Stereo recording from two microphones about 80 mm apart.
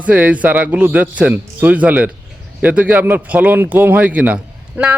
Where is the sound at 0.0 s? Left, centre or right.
Centre.